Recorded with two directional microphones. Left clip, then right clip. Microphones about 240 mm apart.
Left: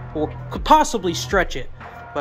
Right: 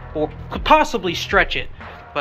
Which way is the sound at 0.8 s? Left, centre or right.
Left.